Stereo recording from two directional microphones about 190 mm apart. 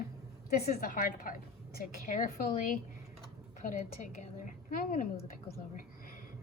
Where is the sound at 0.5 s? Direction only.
50° left (ahead or behind).